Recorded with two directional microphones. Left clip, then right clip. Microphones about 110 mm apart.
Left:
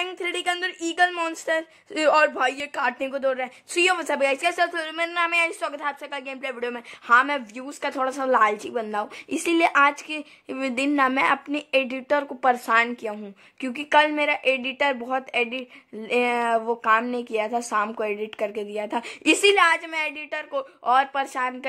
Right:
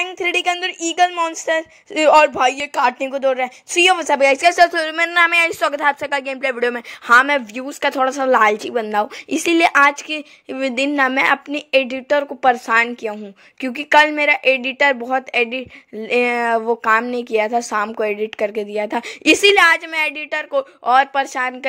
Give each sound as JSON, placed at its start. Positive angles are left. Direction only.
{"t": 0.2, "sound": "a woman's voice", "side_deg": -30}